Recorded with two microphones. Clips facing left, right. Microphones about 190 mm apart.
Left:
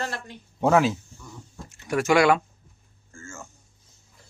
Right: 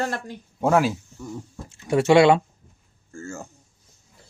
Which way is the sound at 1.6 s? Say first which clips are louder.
Right 4 dB; 25° right (ahead or behind).